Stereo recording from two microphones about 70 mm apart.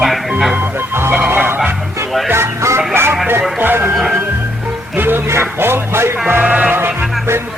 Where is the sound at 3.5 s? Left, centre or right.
Right.